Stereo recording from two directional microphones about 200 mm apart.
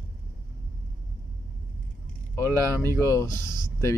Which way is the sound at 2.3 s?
10° left (ahead or behind).